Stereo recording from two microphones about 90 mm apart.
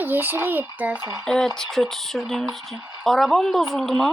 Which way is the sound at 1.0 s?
40° right (ahead or behind).